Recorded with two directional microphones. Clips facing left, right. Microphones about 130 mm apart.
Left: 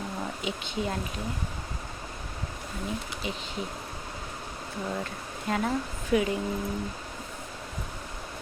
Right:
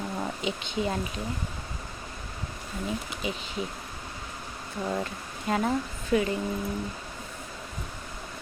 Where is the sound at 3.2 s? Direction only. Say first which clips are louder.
Right 3 dB; 5° right (ahead or behind).